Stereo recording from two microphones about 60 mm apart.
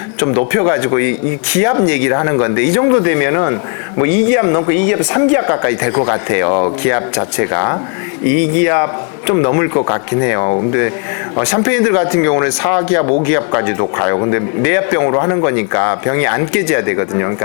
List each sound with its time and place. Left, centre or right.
0.2 s speech: centre
10.7 s speech: centre
14.6 s speech: centre
15.1 s speech: left
15.4 s speech: centre